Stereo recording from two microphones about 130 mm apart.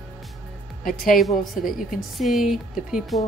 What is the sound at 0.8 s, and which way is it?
Speech, 90° left.